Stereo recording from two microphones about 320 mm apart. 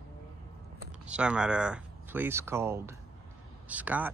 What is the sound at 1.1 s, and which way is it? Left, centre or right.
Speech, centre.